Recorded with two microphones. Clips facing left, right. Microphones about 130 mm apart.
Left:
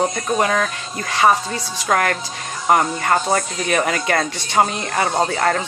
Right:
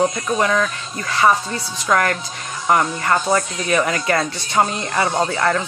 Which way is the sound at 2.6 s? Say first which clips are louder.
Left 1 dB; 30° left (ahead or behind).